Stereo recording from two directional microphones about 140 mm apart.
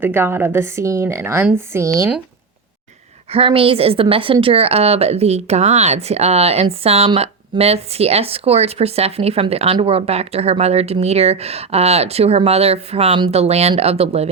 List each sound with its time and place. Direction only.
0.0 s a woman's voice: 15° right (ahead or behind)
3.3 s a woman's voice: 40° right (ahead or behind)